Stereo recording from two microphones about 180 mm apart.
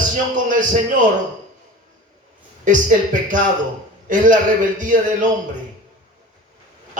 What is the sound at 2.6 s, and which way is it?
A man's voice, 45° right (ahead or behind).